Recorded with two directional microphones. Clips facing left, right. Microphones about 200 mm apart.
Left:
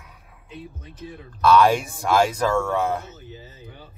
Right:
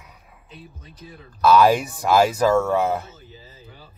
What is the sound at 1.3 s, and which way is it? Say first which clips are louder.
Speech: right 1 dB; 5° right (ahead or behind).